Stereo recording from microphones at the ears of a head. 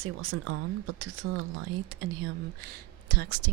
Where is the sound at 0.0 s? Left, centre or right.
Right.